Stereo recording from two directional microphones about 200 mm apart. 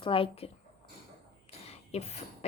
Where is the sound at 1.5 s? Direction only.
30° left (ahead or behind).